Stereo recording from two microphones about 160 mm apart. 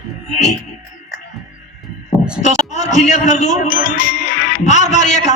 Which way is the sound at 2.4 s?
50° left (ahead or behind).